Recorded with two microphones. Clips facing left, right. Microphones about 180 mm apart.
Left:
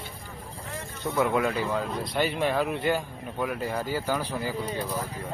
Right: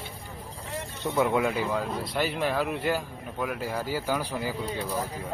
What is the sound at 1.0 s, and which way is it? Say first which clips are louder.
Speech: even; 20° right (ahead or behind).